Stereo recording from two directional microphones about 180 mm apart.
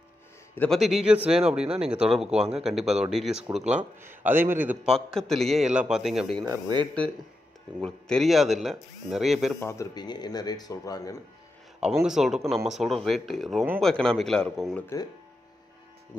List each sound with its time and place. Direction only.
0.6 s a man's voice: centre (ahead or behind)
4.9 s speech: centre (ahead or behind)
6.4 s speech: 20° right (ahead or behind)
7.8 s speech: 5° left (ahead or behind)
9.6 s speech: 15° left (ahead or behind)
11.8 s speech: 5° right (ahead or behind)